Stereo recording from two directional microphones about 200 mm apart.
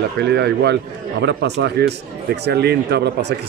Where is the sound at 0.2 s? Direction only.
55° right (ahead or behind).